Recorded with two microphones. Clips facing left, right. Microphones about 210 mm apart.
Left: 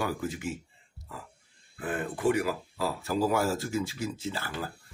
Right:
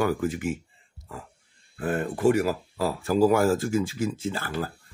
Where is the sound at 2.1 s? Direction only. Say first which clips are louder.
Right 5 dB; 40° right (ahead or behind).